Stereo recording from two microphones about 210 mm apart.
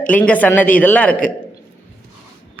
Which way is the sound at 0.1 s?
5° left (ahead or behind).